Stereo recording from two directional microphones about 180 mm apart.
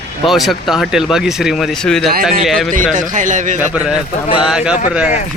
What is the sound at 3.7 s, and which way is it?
A man's voice, 5° right (ahead or behind).